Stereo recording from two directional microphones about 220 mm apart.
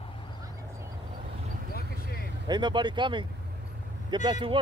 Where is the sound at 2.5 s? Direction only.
20° right (ahead or behind).